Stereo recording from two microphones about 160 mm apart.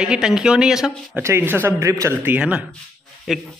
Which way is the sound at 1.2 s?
15° right (ahead or behind).